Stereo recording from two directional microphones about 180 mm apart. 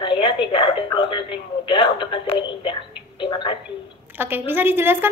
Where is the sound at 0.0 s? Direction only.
25° left (ahead or behind).